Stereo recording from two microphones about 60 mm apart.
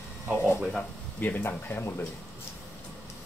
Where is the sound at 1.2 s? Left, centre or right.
Left.